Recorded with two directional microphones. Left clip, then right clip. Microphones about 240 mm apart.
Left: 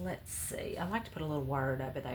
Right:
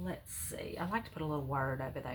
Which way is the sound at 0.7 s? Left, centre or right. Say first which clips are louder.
Right 2 dB; left.